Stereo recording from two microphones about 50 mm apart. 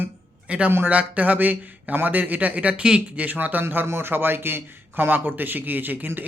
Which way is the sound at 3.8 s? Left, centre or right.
Right.